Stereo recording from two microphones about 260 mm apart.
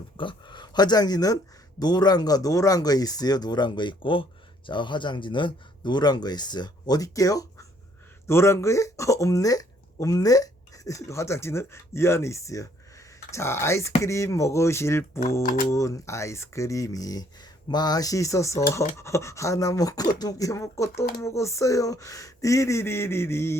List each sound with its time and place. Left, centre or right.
0.2 s speech: centre